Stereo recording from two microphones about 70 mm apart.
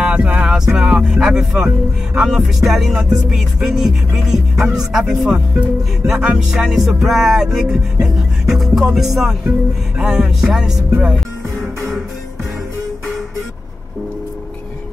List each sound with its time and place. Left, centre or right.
0.0 s music: centre